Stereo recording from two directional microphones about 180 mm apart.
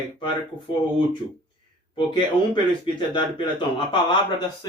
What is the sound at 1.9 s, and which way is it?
A man's voice, 25° left (ahead or behind).